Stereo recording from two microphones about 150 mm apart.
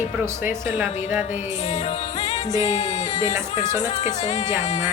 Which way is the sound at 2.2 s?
50° left (ahead or behind).